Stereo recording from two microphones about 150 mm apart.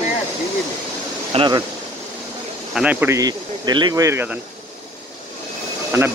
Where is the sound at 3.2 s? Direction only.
30° right (ahead or behind).